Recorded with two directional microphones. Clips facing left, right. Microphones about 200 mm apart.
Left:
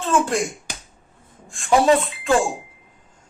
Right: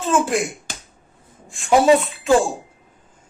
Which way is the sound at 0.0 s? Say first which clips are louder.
Right 1 dB; 5° right (ahead or behind).